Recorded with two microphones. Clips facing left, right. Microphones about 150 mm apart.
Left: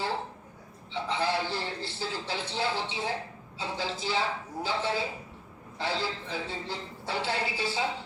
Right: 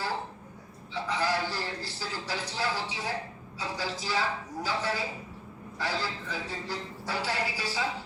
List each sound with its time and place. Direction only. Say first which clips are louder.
1.0 s a man's voice: even; 25° left (ahead or behind)